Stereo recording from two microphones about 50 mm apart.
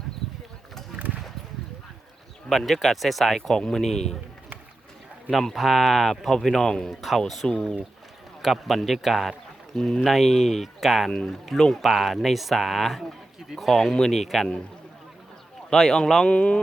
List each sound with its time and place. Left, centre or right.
0.9 s a sound: right
2.5 s speech: centre
5.3 s speech: centre
6.9 s speech: centre
7.4 s speech: centre
8.4 s speech: centre
9.7 s speech: centre
10.0 s speech: centre
15.7 s speech: centre
16.3 s music: left